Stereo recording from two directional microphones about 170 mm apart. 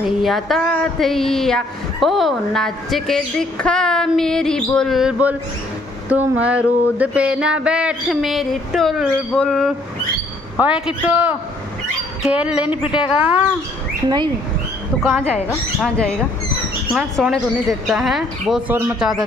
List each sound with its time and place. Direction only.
0.0 s a man's voice: centre (ahead or behind)
14.0 s speech: 25° right (ahead or behind)
15.8 s speech: 5° left (ahead or behind)